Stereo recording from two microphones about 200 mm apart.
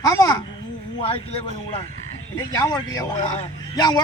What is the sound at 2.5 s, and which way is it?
Speech, 20° left (ahead or behind).